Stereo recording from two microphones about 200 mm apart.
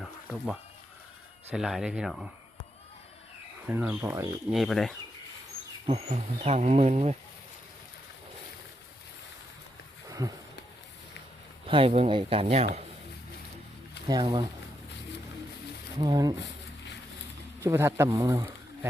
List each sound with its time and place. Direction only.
0.0 s a sound: 5° right (ahead or behind)
1.5 s speech: centre (ahead or behind)
3.7 s speech: 10° right (ahead or behind)
4.5 s speech: centre (ahead or behind)
5.8 s speech: 35° right (ahead or behind)
10.1 s a sound: 15° right (ahead or behind)
11.6 s speech: 30° right (ahead or behind)
14.1 s speech: 20° right (ahead or behind)
16.0 s speech: 20° right (ahead or behind)
16.4 s a sound: 60° left (ahead or behind)
17.6 s speech: 15° right (ahead or behind)